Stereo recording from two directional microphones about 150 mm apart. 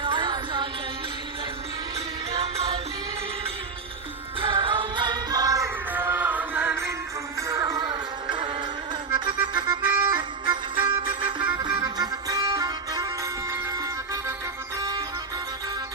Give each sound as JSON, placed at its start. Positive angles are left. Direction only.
{"t": 0.0, "sound": "music", "side_deg": -30}
{"t": 2.4, "sound": "music", "side_deg": -45}
{"t": 4.4, "sound": "music", "side_deg": -35}